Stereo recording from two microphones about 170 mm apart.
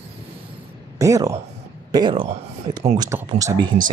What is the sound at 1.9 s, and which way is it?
Speech, 30° right (ahead or behind).